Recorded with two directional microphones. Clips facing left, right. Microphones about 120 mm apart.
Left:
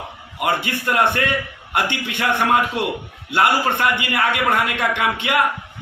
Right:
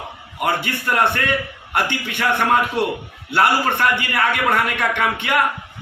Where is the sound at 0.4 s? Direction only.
15° left (ahead or behind).